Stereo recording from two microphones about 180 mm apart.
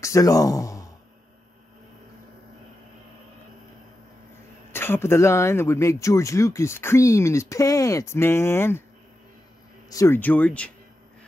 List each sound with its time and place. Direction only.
0.0 s speech: 20° left (ahead or behind)
4.7 s speech: 15° left (ahead or behind)
9.8 s speech: 15° left (ahead or behind)